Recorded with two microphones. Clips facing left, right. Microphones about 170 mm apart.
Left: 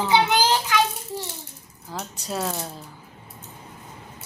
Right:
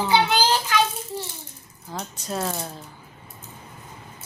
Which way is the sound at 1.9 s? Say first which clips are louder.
Even; 5° left (ahead or behind).